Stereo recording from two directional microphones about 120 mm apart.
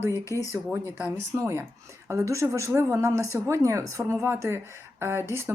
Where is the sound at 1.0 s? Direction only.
25° right (ahead or behind).